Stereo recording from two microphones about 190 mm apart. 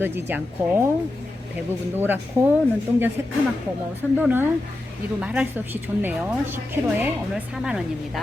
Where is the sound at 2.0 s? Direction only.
10° right (ahead or behind).